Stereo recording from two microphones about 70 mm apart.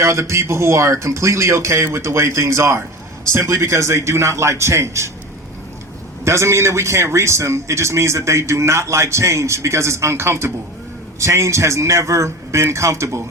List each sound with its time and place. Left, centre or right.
0.0 s a man's voice: right
6.2 s a man's voice: right